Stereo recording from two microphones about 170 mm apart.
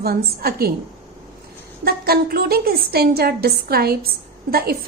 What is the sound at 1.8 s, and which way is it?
A woman's voice, 65° right (ahead or behind).